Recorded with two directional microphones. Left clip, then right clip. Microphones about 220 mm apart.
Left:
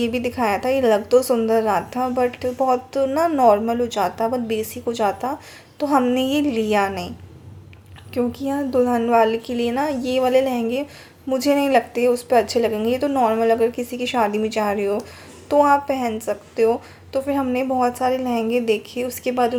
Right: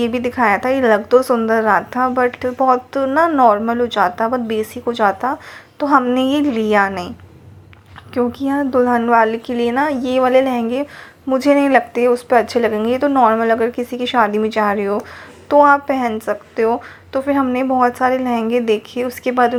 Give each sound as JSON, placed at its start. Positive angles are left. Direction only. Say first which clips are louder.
{"t": 0.0, "sound": "a woman's voice", "louder": "right 5 dB", "side_deg": -10}
{"t": 8.1, "sound": "a woman's voice", "louder": "right 5 dB", "side_deg": -10}